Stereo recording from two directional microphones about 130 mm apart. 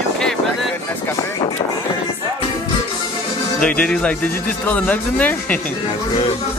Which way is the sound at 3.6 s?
10° left (ahead or behind).